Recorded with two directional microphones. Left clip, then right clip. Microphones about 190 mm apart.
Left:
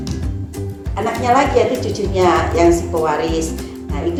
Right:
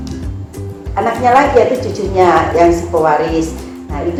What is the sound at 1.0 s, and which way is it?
A woman's voice, 35° left (ahead or behind).